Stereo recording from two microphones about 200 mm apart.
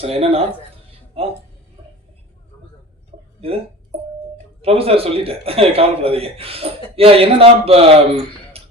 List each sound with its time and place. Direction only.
0.0 s speech: 30° right (ahead or behind)
3.1 s a sound: 35° right (ahead or behind)
4.6 s speech: 30° right (ahead or behind)